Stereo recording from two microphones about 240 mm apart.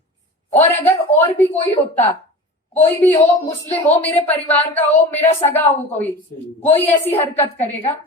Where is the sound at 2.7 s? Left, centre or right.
Centre.